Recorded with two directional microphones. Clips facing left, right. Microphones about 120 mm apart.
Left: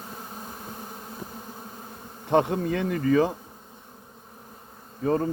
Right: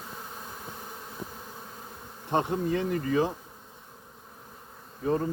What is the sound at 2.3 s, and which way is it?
Insect, 85° left.